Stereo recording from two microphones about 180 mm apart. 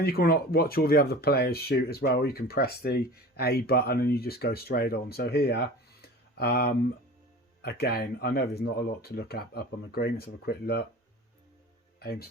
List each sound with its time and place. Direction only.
0.0 s speech: 55° left (ahead or behind)
11.9 s speech: 60° left (ahead or behind)